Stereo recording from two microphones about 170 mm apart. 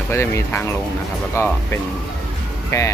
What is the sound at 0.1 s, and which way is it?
Speech, 15° left (ahead or behind).